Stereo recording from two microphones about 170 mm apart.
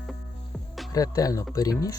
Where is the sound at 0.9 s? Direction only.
20° left (ahead or behind).